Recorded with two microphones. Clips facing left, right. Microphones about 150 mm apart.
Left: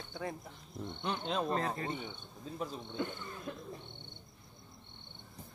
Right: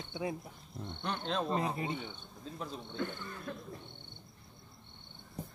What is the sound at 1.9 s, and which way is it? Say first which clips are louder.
Speech: even; 10° left (ahead or behind).